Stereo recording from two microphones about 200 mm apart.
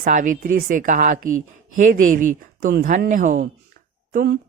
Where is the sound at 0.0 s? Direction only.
40° right (ahead or behind).